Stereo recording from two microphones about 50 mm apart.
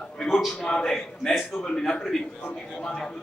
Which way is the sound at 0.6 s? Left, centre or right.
Centre.